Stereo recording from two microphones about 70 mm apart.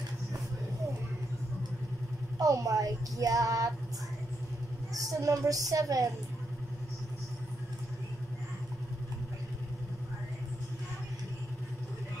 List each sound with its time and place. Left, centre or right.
2.3 s speech: right
4.9 s speech: right